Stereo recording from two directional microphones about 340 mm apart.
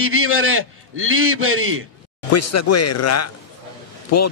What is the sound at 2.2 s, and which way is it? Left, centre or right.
A man's voice, left.